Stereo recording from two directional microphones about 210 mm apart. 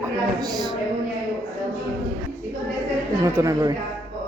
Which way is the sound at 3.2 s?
15° right (ahead or behind).